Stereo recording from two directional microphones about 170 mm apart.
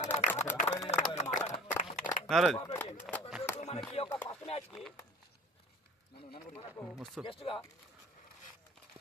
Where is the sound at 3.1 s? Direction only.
Centre (ahead or behind).